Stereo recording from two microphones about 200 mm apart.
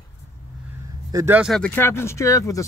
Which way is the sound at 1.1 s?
10° right (ahead or behind).